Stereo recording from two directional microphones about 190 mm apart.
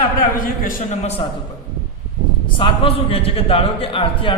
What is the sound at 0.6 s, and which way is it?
Speech, 35° left (ahead or behind).